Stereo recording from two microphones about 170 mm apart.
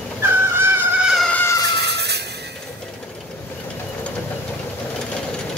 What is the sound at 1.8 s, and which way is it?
Music, 80° right.